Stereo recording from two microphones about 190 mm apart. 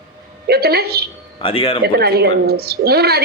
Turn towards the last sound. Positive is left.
turn(degrees=-55)  # may be behind; listen again after turning